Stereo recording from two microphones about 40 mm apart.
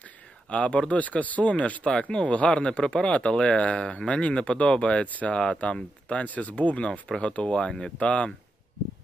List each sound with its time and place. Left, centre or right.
0.5 s speech: left
1.9 s speech: centre
2.2 s speech: left
5.0 s speech: left
5.3 s speech: left
8.0 s speech: left